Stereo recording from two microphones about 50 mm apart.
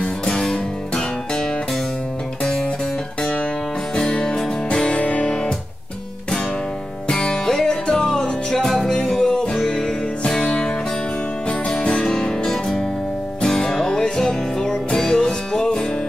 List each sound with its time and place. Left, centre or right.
0.0 s music: centre
3.2 s music: centre
7.1 s music: centre